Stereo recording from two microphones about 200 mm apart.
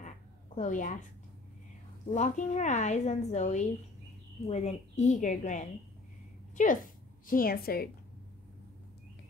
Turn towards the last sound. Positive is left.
turn(degrees=50)  # may be behind; listen again after turning